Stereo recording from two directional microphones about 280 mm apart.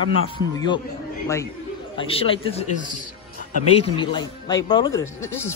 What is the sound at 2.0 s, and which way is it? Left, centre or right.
Speech, centre.